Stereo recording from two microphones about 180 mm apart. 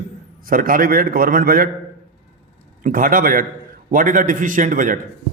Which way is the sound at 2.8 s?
50° right (ahead or behind).